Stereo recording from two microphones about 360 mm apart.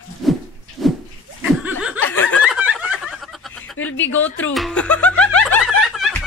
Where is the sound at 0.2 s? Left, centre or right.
Centre.